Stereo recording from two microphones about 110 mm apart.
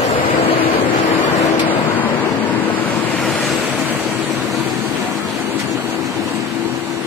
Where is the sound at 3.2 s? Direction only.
Centre (ahead or behind).